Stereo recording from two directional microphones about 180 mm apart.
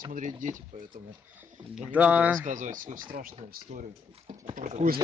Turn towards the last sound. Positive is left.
turn(degrees=-45)  # may be behind; listen again after turning